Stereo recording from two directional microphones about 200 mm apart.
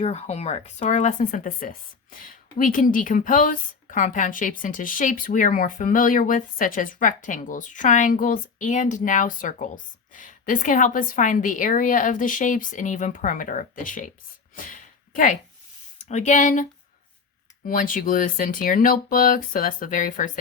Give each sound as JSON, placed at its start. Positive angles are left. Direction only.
{"t": 0.0, "sound": "a woman's voice", "side_deg": 30}
{"t": 14.5, "sound": "a sound", "side_deg": 40}
{"t": 16.0, "sound": "speech", "side_deg": 35}
{"t": 17.7, "sound": "speech", "side_deg": 45}